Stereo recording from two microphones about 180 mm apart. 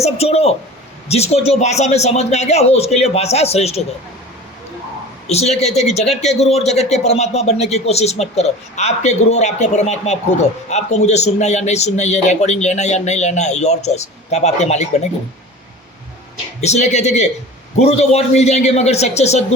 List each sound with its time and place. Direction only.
0.0 s speech: 35° left (ahead or behind)
5.3 s speech: 35° left (ahead or behind)
16.6 s speech: 40° left (ahead or behind)